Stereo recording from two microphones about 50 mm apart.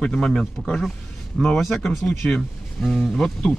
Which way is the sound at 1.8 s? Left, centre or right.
Centre.